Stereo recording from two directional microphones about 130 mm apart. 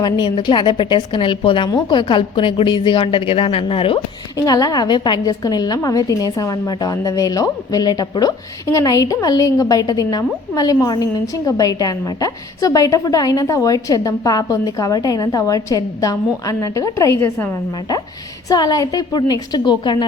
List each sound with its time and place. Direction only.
0.0 s a woman's voice: 40° left (ahead or behind)
4.4 s a woman's voice: 30° left (ahead or behind)
18.4 s a woman's voice: 30° left (ahead or behind)